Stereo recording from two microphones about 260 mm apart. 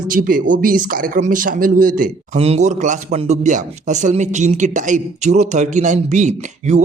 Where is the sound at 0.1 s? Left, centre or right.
Right.